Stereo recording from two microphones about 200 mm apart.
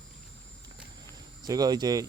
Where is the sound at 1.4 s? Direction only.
20° right (ahead or behind).